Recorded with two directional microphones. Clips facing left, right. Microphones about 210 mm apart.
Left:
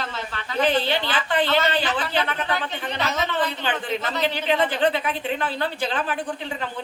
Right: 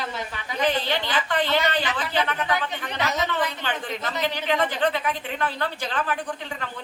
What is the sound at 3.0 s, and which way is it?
A woman's voice, 15° right (ahead or behind).